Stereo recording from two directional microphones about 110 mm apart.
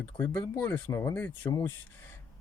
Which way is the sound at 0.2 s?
15° left (ahead or behind).